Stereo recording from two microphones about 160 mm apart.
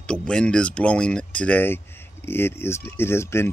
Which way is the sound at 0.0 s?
5° left (ahead or behind).